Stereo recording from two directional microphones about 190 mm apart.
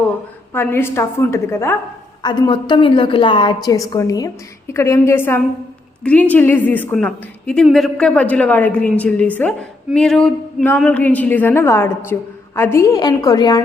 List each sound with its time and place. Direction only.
0.5 s a woman's voice: 10° left (ahead or behind)
2.2 s a woman's voice: 25° left (ahead or behind)